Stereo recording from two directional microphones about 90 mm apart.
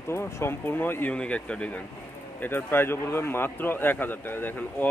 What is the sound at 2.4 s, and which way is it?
A man's voice, 25° left (ahead or behind).